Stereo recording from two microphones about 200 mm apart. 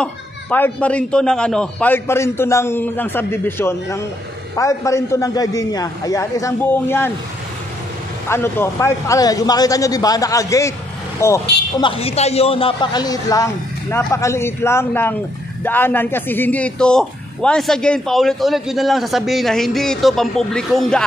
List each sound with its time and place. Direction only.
0.0 s a man's voice: 5° left (ahead or behind)
8.3 s a man's voice: 10° left (ahead or behind)
11.8 s a man's voice: 30° left (ahead or behind); by 21.0 s centre (ahead or behind)